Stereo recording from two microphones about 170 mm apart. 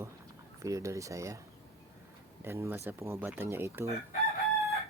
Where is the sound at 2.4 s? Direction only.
15° right (ahead or behind).